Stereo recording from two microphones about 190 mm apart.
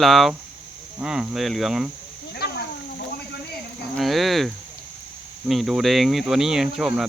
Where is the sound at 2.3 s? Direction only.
55° left (ahead or behind).